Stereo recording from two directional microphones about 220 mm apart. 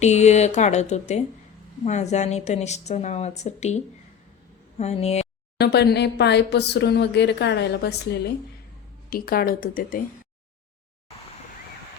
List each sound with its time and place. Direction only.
0.0 s a woman's voice: 30° left (ahead or behind)
5.5 s speech: 45° left (ahead or behind)
9.0 s a woman's voice: 40° left (ahead or behind)